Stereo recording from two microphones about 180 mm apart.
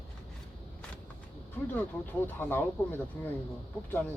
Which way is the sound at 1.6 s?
10° left (ahead or behind).